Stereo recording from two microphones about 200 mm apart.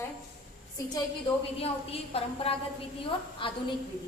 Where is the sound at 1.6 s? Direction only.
30° left (ahead or behind).